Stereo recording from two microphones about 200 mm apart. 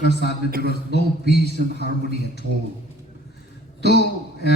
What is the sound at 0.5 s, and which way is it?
Speech, 50° right (ahead or behind).